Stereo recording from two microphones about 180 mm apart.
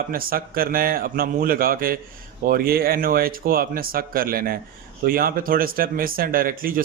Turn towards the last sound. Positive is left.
turn(degrees=-50)  # may be behind; listen again after turning